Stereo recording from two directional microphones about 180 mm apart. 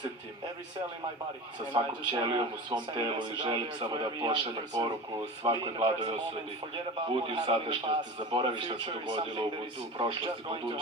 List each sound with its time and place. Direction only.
1.7 s speech: 25° right (ahead or behind)